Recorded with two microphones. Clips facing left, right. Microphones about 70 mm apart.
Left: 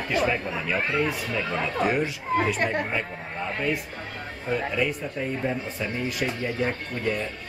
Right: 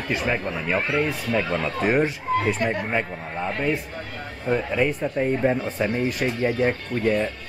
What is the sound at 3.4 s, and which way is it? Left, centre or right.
Speech, right.